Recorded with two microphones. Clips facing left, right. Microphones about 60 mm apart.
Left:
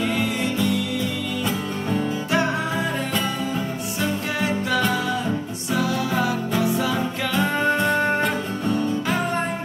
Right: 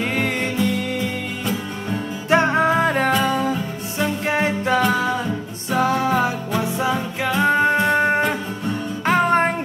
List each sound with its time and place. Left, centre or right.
0.0 s music: right
2.3 s music: right
4.0 s music: right
9.0 s music: right